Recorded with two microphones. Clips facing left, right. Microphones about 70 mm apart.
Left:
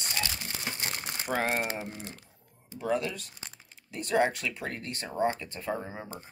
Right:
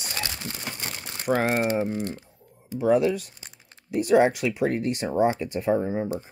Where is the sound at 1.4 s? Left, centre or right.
Centre.